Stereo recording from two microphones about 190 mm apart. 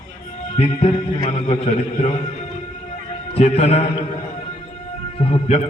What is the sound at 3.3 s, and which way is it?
Speech, 30° left (ahead or behind).